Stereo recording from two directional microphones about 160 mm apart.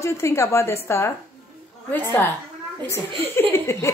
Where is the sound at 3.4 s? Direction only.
15° left (ahead or behind).